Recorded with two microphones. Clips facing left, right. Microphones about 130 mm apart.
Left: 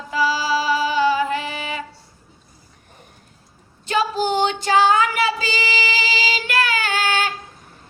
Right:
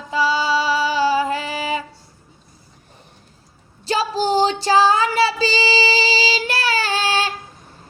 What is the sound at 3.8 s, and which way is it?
Female singing, 30° right (ahead or behind).